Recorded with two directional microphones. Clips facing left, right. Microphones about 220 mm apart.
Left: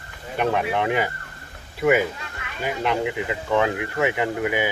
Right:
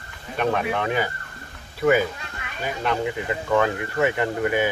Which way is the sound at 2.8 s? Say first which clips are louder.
Even; 15° left (ahead or behind).